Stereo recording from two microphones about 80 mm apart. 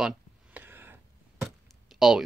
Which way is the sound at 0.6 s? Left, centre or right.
Right.